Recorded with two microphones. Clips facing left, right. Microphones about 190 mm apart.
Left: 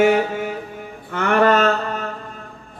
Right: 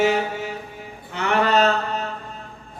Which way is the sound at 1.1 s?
50° left (ahead or behind).